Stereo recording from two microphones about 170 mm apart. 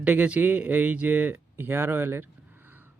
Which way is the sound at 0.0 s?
10° right (ahead or behind).